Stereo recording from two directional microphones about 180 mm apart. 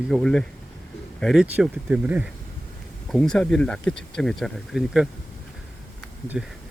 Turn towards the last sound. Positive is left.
turn(degrees=-5)  # may be behind; listen again after turning